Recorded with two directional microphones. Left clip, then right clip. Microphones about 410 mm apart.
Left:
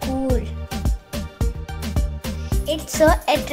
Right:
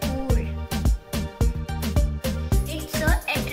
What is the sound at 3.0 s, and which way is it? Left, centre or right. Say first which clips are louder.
Music: left 11 dB; centre.